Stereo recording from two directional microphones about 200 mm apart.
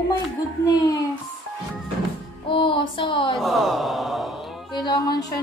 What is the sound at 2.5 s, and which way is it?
Music, 25° left (ahead or behind).